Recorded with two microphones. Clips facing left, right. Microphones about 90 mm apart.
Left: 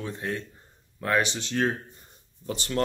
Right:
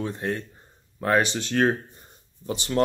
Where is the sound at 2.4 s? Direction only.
20° right (ahead or behind).